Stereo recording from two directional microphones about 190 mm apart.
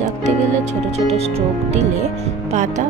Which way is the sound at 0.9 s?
35° right (ahead or behind).